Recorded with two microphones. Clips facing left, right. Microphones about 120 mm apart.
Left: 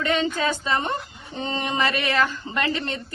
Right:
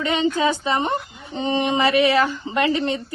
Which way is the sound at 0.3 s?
15° right (ahead or behind).